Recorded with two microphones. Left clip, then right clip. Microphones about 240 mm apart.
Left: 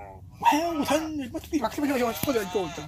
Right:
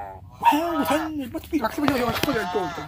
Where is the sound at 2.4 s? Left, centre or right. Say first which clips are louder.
Right 4 dB; right.